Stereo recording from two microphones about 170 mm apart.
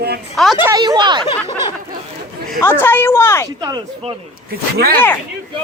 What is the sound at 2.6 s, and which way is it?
Speech, 10° left (ahead or behind).